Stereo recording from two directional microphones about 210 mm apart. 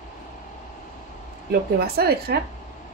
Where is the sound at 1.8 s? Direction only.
50° right (ahead or behind).